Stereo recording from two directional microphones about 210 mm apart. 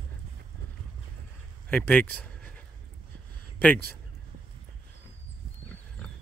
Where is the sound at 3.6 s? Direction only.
10° left (ahead or behind).